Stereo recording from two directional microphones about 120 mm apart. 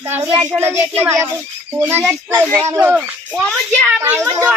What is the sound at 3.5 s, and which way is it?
Speech, 5° left (ahead or behind).